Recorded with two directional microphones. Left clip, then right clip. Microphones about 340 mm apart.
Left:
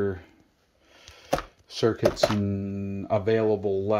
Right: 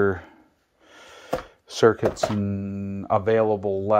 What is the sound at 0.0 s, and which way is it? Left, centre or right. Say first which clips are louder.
Speech: right 7 dB; centre.